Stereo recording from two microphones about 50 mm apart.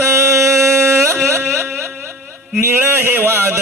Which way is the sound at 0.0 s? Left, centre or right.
Right.